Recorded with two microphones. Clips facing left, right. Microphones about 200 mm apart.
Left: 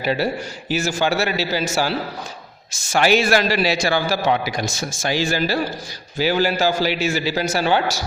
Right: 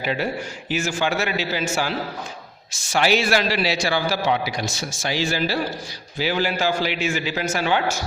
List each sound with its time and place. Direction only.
0.0 s a man's voice: 40° left (ahead or behind)